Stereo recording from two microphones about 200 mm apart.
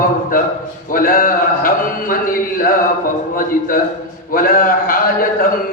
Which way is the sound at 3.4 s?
45° left (ahead or behind).